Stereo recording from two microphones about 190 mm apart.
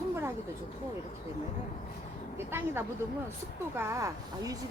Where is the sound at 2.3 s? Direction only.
10° right (ahead or behind).